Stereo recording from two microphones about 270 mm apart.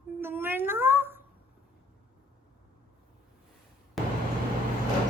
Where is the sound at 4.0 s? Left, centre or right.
Centre.